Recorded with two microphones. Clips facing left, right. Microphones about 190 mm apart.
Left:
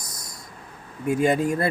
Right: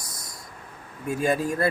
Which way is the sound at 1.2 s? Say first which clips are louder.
Left 2 dB; 20° left (ahead or behind).